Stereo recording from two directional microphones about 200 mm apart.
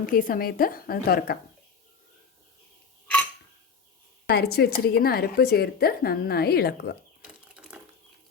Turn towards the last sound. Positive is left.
turn(degrees=-5)  # may be behind; listen again after turning